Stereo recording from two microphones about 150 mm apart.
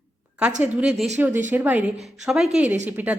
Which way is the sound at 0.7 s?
5° right (ahead or behind).